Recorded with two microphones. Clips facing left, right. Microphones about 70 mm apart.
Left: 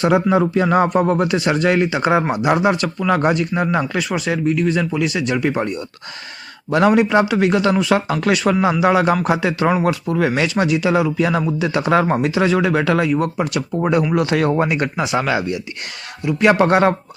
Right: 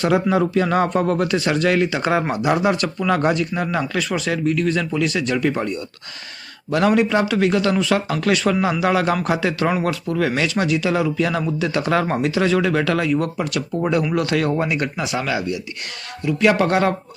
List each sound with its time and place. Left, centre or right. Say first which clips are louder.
0.0 s speech: left 2 dB; centre
3.2 s speech: left 2 dB; left
8.4 s speech: left 3 dB; centre; by 15.5 s left
16.6 s speech: left 4 dB; left